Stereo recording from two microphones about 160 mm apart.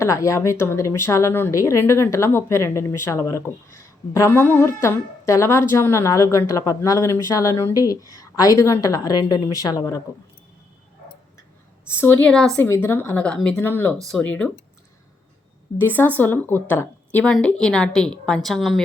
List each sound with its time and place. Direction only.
0.0 s speech: 20° left (ahead or behind)
11.9 s a woman's voice: 15° left (ahead or behind)
12.6 s speech: 15° left (ahead or behind)
15.8 s a woman's voice: 10° left (ahead or behind)